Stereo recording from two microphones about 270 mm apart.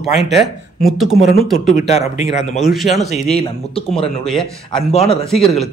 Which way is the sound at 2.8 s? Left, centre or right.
Centre.